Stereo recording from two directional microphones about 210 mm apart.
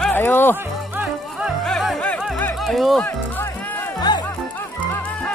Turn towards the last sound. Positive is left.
turn(degrees=5)  # may be behind; listen again after turning